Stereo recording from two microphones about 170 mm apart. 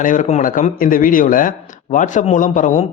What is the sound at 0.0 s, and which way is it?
A man's voice, 45° left (ahead or behind).